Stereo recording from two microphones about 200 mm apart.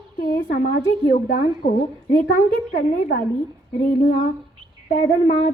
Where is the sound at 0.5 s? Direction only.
45° left (ahead or behind).